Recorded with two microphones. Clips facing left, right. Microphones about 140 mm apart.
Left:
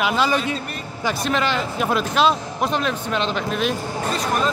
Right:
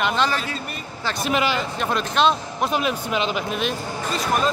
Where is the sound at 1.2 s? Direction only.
5° right (ahead or behind).